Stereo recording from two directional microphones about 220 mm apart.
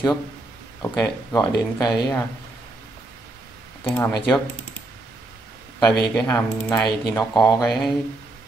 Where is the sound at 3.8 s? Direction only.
10° left (ahead or behind).